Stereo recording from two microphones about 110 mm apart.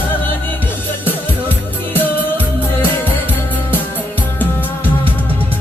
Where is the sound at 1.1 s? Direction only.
15° left (ahead or behind).